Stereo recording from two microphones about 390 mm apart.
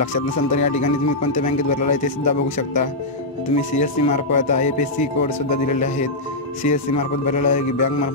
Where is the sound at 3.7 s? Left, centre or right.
Centre.